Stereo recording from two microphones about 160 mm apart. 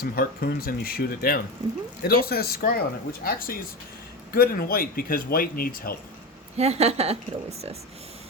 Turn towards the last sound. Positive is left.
turn(degrees=-40)  # may be behind; listen again after turning